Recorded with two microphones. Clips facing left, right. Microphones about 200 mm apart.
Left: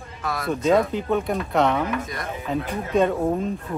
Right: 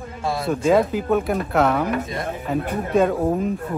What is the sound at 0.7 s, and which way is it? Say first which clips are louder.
Speech: right 2 dB; 5° right (ahead or behind).